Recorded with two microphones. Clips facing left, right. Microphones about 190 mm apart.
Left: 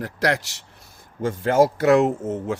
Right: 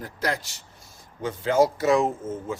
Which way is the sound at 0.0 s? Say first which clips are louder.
Left 6 dB; 75° left (ahead or behind).